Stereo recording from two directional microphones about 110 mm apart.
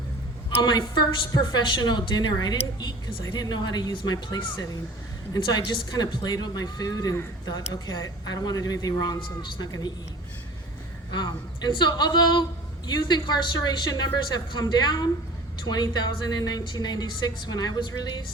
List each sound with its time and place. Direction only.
0.6 s a woman's voice: 45° left (ahead or behind)
11.1 s a woman's voice: 40° left (ahead or behind)